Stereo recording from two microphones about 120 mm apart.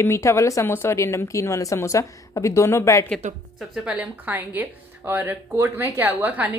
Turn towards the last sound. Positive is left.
turn(degrees=-15)  # may be behind; listen again after turning